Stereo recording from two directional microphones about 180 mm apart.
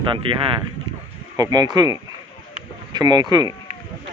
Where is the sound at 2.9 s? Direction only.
20° right (ahead or behind).